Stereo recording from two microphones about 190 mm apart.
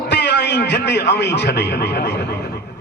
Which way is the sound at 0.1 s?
60° left (ahead or behind).